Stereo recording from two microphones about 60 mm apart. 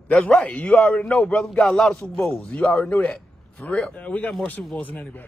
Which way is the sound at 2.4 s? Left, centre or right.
Left.